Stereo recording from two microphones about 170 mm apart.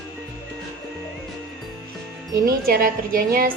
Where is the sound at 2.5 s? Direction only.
60° right (ahead or behind).